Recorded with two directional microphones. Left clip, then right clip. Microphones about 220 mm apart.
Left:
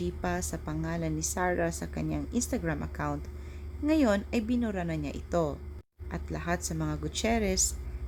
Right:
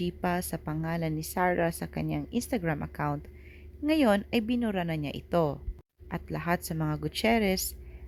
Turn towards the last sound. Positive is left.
turn(degrees=-25)  # may be behind; listen again after turning